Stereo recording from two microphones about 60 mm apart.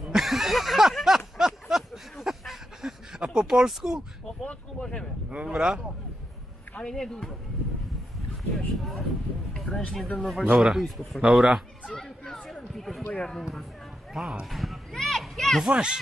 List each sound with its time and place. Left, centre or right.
0.0 s a sound: centre
4.5 s speech: centre
5.3 s speech: centre
6.8 s speech: centre
8.5 s speech: centre
9.5 s a sound: centre
9.9 s a man's voice: centre
12.0 s chatter: centre
12.7 s speech: centre
14.4 s a sound: centre
15.7 s speech: centre